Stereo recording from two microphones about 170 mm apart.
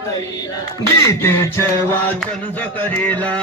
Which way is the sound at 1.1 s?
15° left (ahead or behind).